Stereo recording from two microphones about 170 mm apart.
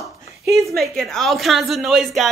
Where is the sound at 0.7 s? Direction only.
Centre (ahead or behind).